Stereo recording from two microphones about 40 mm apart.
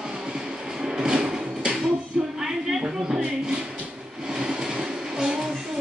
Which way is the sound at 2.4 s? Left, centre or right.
Centre.